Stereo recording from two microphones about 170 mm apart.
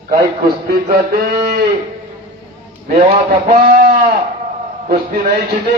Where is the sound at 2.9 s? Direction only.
50° right (ahead or behind).